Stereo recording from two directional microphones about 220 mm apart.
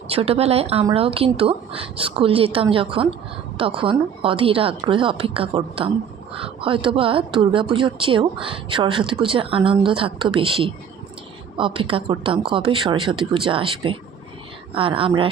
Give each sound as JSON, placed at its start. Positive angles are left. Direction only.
{"t": 0.1, "sound": "a woman's voice", "side_deg": -25}